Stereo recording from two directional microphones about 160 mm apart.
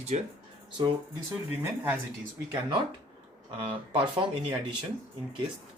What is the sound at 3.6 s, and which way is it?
Speech, 30° right (ahead or behind).